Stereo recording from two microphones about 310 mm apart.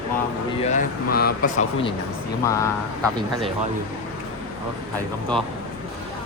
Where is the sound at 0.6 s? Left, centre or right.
Left.